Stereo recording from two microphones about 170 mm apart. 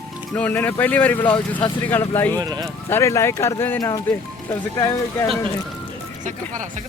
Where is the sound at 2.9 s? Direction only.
15° left (ahead or behind).